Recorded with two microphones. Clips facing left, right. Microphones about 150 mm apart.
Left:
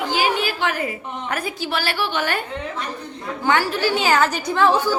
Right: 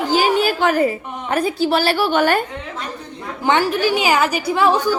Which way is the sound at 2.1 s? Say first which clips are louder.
Right 8 dB; 50° right (ahead or behind).